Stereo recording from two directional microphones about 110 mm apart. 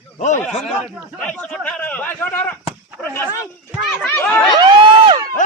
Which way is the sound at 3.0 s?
5° right (ahead or behind).